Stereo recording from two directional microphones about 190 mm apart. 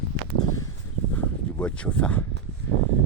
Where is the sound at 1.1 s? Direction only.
10° left (ahead or behind).